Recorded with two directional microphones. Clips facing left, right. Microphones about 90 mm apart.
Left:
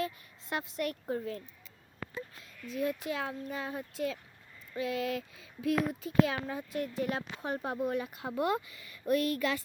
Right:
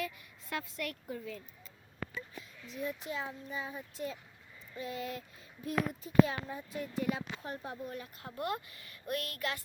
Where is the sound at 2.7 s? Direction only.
85° left.